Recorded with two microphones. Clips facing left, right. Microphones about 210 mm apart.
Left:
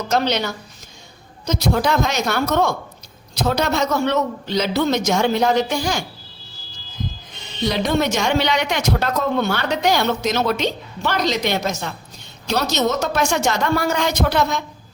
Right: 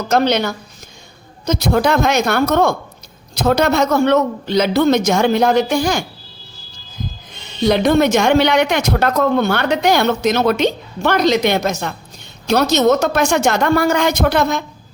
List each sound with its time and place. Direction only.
0.1 s speech: 55° right (ahead or behind)
7.7 s speech: 55° right (ahead or behind)